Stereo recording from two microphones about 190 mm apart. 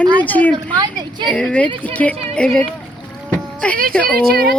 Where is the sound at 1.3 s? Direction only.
5° left (ahead or behind).